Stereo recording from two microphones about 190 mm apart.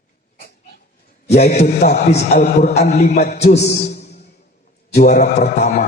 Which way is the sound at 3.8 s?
35° left (ahead or behind).